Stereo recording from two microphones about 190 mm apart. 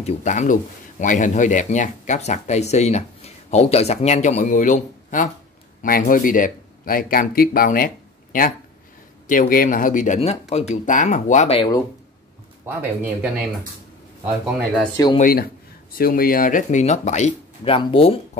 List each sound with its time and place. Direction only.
0.0 s speech: 40° left (ahead or behind)
12.6 s speech: 10° right (ahead or behind)
15.1 s speech: 50° left (ahead or behind); by 18.1 s 30° left (ahead or behind)